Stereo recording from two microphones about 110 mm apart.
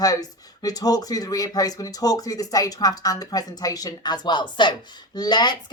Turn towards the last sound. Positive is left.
turn(degrees=40)  # may be behind; listen again after turning